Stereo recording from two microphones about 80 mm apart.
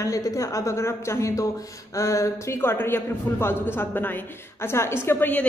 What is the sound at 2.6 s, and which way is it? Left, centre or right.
A woman's voice, left.